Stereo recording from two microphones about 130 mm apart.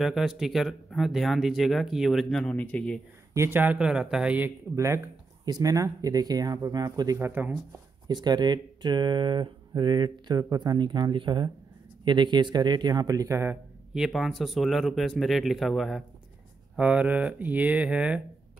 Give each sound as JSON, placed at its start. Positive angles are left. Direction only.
{"t": 0.0, "sound": "speech", "side_deg": 0}
{"t": 3.3, "sound": "speech", "side_deg": -15}
{"t": 4.7, "sound": "speech", "side_deg": -20}
{"t": 7.2, "sound": "speech", "side_deg": -15}
{"t": 8.1, "sound": "speech", "side_deg": -35}
{"t": 13.9, "sound": "speech", "side_deg": 0}
{"t": 16.7, "sound": "speech", "side_deg": -10}